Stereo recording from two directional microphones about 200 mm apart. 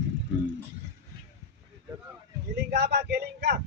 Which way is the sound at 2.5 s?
55° right (ahead or behind).